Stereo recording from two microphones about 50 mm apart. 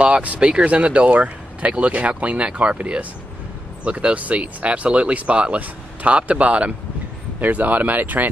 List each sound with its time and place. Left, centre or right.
0.0 s speech: right
7.3 s speech: right